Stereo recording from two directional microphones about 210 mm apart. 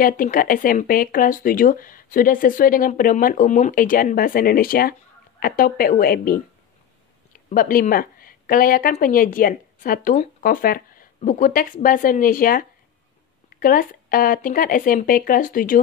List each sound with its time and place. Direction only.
0.0 s a woman's voice: 40° left (ahead or behind)
7.4 s a woman's voice: 40° left (ahead or behind)